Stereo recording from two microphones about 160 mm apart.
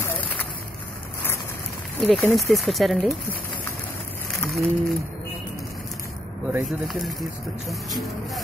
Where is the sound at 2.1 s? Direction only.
5° left (ahead or behind).